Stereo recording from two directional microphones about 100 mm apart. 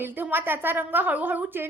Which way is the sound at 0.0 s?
20° right (ahead or behind).